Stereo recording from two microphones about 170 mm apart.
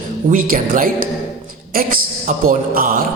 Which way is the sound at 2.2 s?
55° right (ahead or behind).